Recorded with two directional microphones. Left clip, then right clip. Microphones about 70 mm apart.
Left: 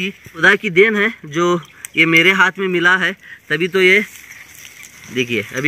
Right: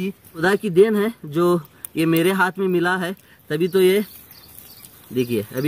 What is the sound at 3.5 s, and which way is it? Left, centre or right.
Speech, centre.